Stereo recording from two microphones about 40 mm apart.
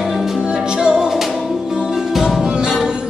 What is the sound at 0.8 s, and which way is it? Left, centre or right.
Music, centre.